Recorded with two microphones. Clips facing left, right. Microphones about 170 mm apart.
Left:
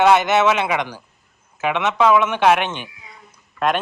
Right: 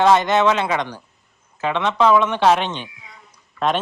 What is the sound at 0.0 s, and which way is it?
Speech, 5° left (ahead or behind).